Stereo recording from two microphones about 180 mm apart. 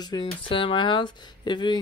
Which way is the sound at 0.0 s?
25° left (ahead or behind).